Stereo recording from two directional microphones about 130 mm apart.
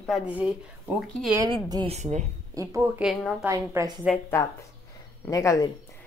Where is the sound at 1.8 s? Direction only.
60° right (ahead or behind).